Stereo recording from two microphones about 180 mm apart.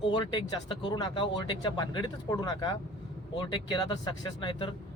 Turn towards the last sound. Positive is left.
turn(degrees=25)  # may be behind; listen again after turning